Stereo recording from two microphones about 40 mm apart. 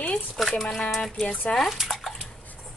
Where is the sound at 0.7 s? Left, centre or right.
Centre.